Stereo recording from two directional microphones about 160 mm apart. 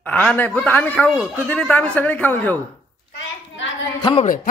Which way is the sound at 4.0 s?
30° left (ahead or behind).